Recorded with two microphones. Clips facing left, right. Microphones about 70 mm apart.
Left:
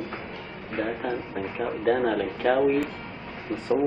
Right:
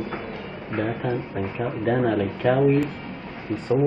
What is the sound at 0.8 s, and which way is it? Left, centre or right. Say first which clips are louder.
Speech: right 3 dB; centre.